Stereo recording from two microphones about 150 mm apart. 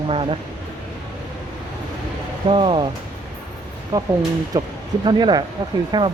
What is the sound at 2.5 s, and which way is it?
Speech, 30° right (ahead or behind).